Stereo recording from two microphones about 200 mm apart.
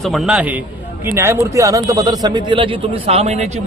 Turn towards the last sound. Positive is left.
turn(degrees=-35)  # may be behind; listen again after turning